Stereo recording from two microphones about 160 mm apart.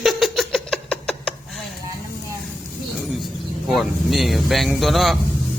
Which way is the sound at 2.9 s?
Centre (ahead or behind).